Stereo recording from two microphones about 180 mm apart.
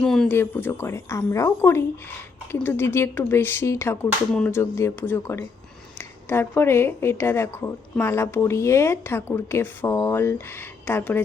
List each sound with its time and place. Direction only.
0.0 s speech: 5° left (ahead or behind)
4.3 s a sound: 5° left (ahead or behind)
4.5 s speech: 15° left (ahead or behind)